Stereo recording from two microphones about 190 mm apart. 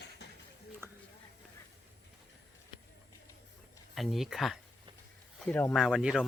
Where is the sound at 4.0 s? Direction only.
Centre (ahead or behind).